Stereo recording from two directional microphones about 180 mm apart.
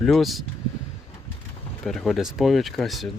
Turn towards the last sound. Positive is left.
turn(degrees=0)  # may be behind; listen again after turning